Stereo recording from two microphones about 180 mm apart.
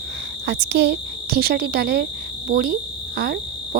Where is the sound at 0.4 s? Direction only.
70° right (ahead or behind).